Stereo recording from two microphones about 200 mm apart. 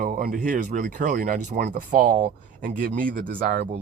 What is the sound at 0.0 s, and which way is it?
Speech, 45° right (ahead or behind).